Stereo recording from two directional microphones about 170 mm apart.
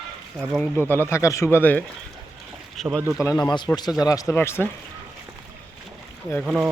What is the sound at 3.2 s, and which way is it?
A man's voice, 20° left (ahead or behind).